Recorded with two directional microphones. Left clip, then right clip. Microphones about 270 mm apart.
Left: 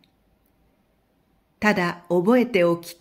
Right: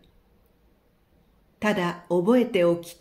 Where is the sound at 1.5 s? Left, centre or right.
Left.